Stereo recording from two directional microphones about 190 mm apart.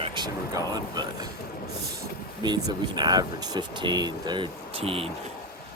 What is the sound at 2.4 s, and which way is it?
Speech, 20° right (ahead or behind).